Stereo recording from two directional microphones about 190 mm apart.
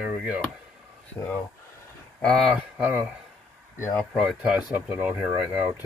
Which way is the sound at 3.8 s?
10° left (ahead or behind).